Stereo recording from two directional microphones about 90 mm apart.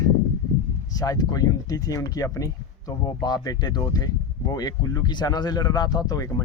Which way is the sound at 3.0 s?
50° left (ahead or behind).